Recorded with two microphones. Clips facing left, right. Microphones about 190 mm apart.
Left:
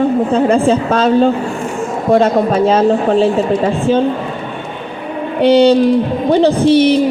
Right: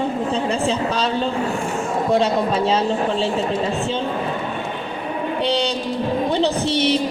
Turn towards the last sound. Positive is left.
turn(degrees=55)  # may be behind; listen again after turning